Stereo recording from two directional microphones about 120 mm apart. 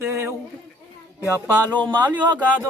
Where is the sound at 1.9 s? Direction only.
35° right (ahead or behind).